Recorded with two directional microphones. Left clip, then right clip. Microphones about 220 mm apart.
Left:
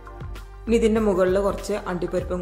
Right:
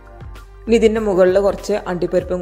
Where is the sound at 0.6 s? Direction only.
20° right (ahead or behind).